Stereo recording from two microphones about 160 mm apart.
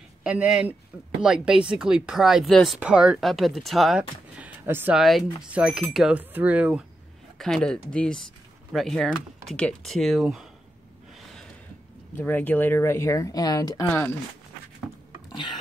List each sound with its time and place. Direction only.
0.2 s speech: 5° right (ahead or behind)
7.3 s speech: 5° left (ahead or behind)
12.2 s speech: 10° left (ahead or behind)
13.8 s speech: 10° left (ahead or behind)